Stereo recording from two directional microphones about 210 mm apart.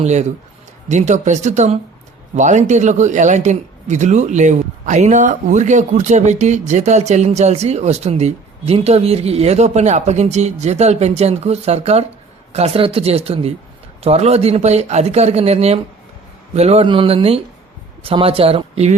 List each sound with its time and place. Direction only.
0.0 s a man's voice: 35° right (ahead or behind)